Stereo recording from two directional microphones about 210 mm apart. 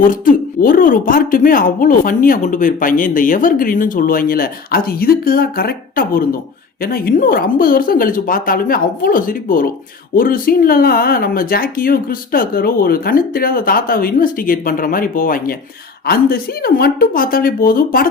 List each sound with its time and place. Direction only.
0.0 s speech: 40° left (ahead or behind)